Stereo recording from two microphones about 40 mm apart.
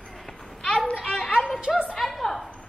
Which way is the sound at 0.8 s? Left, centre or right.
Left.